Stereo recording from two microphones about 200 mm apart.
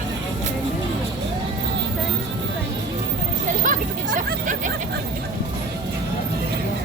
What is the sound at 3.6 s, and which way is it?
Chatter, 40° right (ahead or behind).